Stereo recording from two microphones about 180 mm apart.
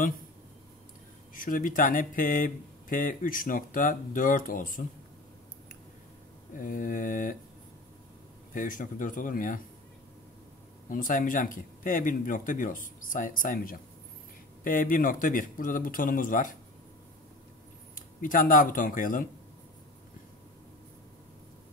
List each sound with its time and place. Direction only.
1.3 s speech: 50° left (ahead or behind)
6.5 s speech: 45° left (ahead or behind)
8.5 s speech: 50° left (ahead or behind)
10.9 s speech: 50° left (ahead or behind)
17.9 s speech: 50° left (ahead or behind)